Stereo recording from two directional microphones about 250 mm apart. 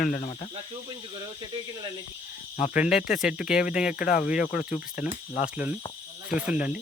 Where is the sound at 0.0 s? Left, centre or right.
Left.